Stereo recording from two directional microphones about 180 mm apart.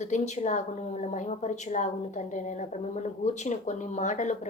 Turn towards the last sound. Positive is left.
turn(degrees=40)  # may be behind; listen again after turning